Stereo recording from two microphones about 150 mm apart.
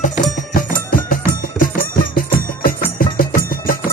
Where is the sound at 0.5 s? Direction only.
70° left (ahead or behind).